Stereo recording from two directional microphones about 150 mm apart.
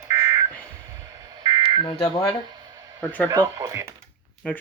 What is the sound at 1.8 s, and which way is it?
Speech, 35° left (ahead or behind).